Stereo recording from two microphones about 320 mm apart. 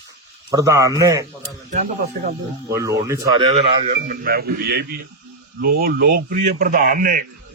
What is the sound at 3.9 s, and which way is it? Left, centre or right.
A man's voice, right.